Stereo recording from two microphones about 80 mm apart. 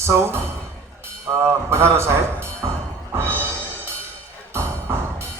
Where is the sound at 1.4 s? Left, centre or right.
Right.